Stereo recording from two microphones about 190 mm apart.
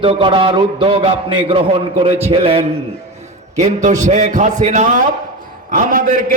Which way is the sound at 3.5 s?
40° right (ahead or behind).